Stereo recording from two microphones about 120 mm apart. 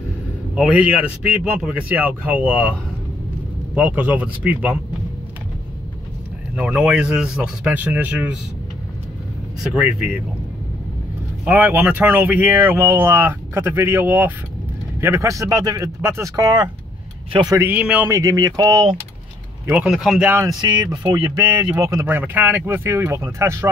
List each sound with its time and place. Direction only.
0.6 s speech: 10° right (ahead or behind)
3.7 s speech: 10° right (ahead or behind)
6.5 s speech: 10° right (ahead or behind)
9.6 s speech: 5° right (ahead or behind)
11.4 s speech: 15° right (ahead or behind)
17.3 s speech: 40° right (ahead or behind)
17.6 s speech: 15° right (ahead or behind)
18.1 s speech: 30° right (ahead or behind)
19.7 s speech: 5° right (ahead or behind)
20.6 s speech: 35° right (ahead or behind)
22.0 s speech: 15° right (ahead or behind)